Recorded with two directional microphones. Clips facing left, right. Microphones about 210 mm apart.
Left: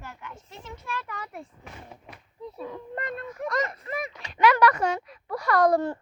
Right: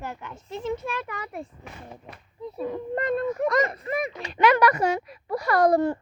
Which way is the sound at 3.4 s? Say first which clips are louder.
Right 6 dB; 75° right (ahead or behind).